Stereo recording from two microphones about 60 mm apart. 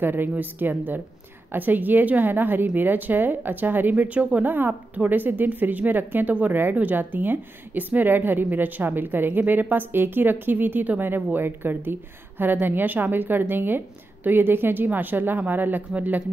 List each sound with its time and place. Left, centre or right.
0.0 s a woman's voice: right